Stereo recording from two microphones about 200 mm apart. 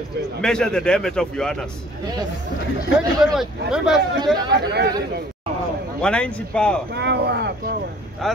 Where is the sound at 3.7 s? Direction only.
5° right (ahead or behind).